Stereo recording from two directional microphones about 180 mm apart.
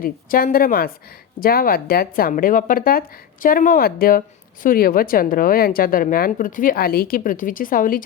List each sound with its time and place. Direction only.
0.0 s a woman's voice: 55° left (ahead or behind)